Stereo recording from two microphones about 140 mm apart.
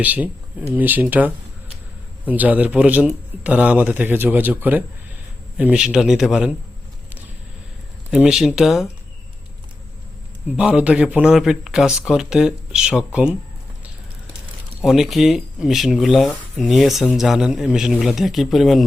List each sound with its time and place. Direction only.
0.0 s speech: 10° right (ahead or behind)
2.2 s a man's voice: 10° right (ahead or behind)
8.1 s a man's voice: 5° right (ahead or behind)
10.6 s a man's voice: 10° right (ahead or behind)
14.8 s a man's voice: 5° right (ahead or behind)